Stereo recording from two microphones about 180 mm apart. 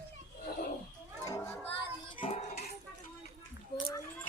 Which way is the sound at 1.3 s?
15° left (ahead or behind).